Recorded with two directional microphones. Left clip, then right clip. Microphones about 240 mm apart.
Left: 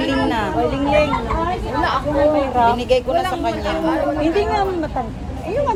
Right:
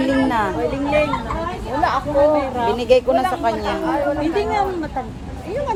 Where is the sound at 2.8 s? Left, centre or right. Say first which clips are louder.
Right 2 dB; right.